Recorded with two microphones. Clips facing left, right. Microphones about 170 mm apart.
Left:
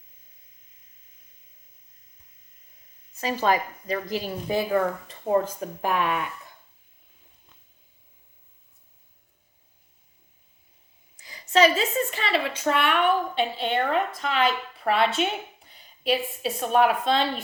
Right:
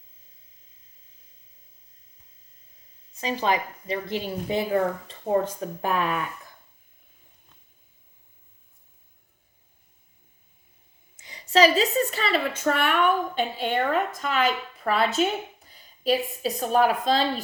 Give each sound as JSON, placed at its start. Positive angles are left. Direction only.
{"t": 3.2, "sound": "a woman's voice", "side_deg": -20}
{"t": 11.2, "sound": "a woman's voice", "side_deg": -30}
{"t": 15.6, "sound": "a sound", "side_deg": -40}
{"t": 16.5, "sound": "a woman's voice", "side_deg": -35}